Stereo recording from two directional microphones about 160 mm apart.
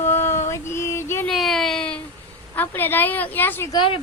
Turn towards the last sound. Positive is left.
turn(degrees=35)  # may be behind; listen again after turning